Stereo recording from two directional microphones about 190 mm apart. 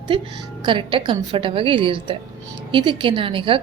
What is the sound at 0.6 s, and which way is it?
A woman's voice, 25° right (ahead or behind).